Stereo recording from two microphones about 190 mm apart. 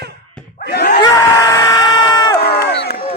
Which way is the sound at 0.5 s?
55° left (ahead or behind).